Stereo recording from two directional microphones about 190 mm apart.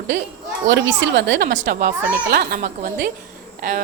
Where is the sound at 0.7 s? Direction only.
70° right (ahead or behind).